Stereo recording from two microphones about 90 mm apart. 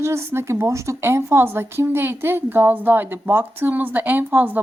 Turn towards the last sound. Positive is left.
turn(degrees=-20)  # may be behind; listen again after turning